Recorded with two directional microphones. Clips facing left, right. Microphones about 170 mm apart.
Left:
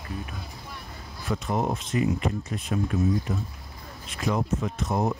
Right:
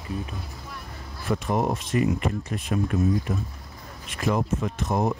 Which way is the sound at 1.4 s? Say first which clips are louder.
Right 1 dB; 60° right (ahead or behind).